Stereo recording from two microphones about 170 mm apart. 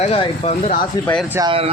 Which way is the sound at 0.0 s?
40° left (ahead or behind).